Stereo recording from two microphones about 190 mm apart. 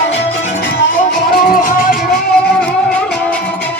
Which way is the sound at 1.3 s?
50° left (ahead or behind).